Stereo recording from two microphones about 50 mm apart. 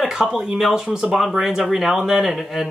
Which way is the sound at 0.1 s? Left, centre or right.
Centre.